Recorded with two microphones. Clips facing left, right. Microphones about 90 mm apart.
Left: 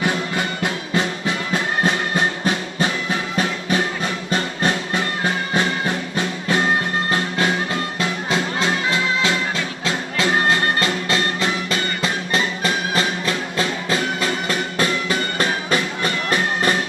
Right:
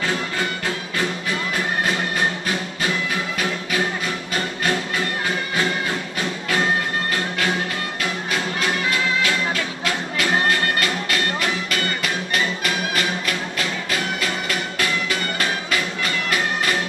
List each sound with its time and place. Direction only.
0.0 s music: 20° left (ahead or behind)